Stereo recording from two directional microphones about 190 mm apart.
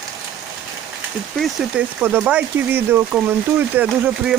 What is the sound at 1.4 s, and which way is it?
Speech, centre (ahead or behind).